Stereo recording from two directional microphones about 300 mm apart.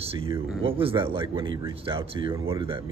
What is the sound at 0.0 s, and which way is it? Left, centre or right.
Speech, centre.